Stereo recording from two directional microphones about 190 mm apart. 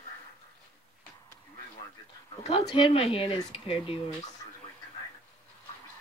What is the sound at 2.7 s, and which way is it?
Speech, 30° left (ahead or behind).